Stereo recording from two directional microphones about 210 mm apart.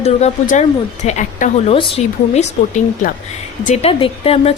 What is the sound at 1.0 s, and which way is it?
A woman's voice, 35° left (ahead or behind).